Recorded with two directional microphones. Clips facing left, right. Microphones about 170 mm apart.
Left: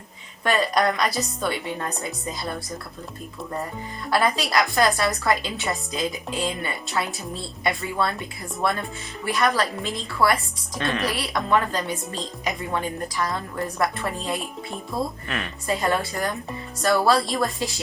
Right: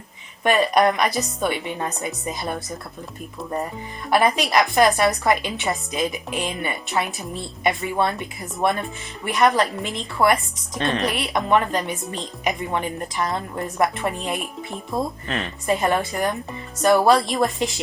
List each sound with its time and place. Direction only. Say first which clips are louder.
0.4 s a woman's voice: right 4 dB; 20° right (ahead or behind)
4.1 s a woman's voice: right 3 dB; 20° right (ahead or behind)
15.6 s a woman's voice: right 3 dB; 20° right (ahead or behind)